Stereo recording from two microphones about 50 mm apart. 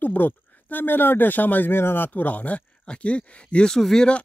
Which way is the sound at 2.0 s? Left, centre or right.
Left.